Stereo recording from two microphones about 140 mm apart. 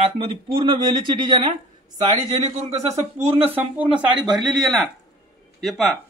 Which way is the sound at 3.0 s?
45° right (ahead or behind).